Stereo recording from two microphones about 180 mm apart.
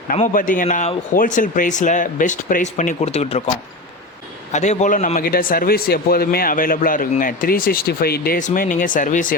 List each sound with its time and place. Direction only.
0.1 s speech: 50° left (ahead or behind)
4.5 s speech: 40° left (ahead or behind)